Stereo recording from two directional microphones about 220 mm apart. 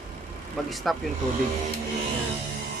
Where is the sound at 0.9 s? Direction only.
Centre (ahead or behind).